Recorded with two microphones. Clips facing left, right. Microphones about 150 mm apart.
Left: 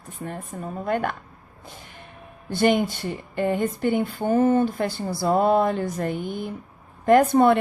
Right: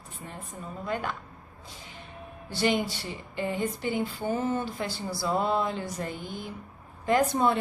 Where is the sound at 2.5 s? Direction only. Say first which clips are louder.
Left 6 dB; 55° left (ahead or behind).